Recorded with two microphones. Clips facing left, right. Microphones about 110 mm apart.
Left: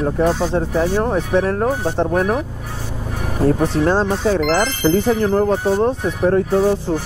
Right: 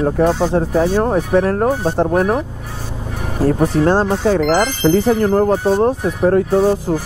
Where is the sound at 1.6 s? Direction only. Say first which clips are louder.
Right 3 dB; 15° right (ahead or behind).